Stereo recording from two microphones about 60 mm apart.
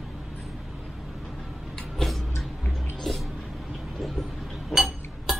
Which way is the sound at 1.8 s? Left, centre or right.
Centre.